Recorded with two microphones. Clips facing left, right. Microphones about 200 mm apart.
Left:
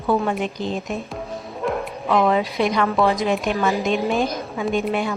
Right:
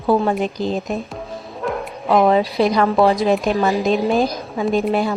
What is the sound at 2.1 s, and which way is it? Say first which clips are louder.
A woman's voice: right 4 dB; 35° right (ahead or behind).